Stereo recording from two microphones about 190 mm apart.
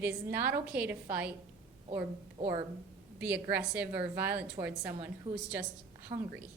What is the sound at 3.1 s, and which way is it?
A woman's voice, 10° right (ahead or behind).